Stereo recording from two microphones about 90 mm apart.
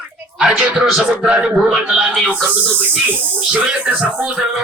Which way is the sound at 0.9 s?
5° right (ahead or behind).